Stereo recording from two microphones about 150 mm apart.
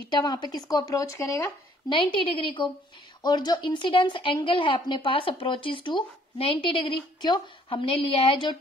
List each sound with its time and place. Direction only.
0.1 s speech: 30° left (ahead or behind)
2.3 s a woman's voice: 35° left (ahead or behind)